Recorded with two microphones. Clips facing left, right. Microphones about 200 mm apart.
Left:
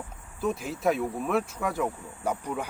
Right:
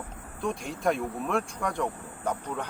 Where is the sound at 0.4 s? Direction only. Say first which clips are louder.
Left 2 dB; 5° left (ahead or behind).